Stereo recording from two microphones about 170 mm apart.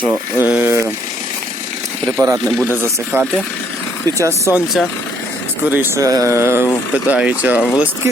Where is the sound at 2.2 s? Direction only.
20° right (ahead or behind).